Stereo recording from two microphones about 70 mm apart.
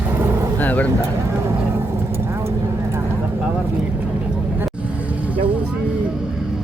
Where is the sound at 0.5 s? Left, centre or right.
Left.